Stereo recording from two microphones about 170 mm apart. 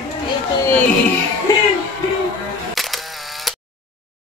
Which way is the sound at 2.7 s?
Centre (ahead or behind).